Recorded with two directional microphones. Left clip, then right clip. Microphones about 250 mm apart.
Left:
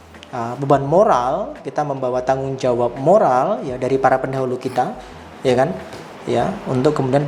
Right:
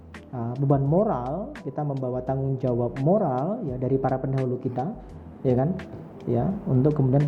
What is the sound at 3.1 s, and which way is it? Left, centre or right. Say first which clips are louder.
A man's voice: left 11 dB; centre.